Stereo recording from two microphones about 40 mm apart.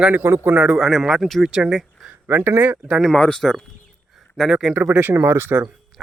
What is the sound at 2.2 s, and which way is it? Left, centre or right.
Speech, right.